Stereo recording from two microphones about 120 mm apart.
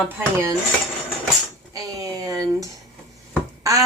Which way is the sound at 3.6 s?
25° right (ahead or behind).